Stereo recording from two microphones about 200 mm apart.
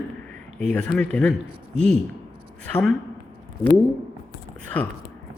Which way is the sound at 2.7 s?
Centre (ahead or behind).